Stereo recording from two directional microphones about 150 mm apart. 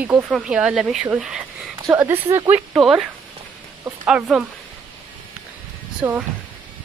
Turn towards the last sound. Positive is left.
turn(degrees=-15)  # may be behind; listen again after turning